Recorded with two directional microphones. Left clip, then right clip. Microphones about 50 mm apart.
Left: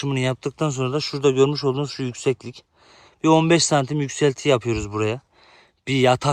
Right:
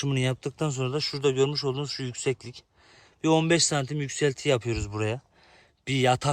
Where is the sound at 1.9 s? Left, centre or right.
Left.